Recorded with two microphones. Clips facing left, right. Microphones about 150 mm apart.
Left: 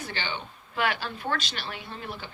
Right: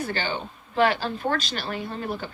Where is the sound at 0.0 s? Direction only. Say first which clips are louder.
Right 6 dB; 40° right (ahead or behind).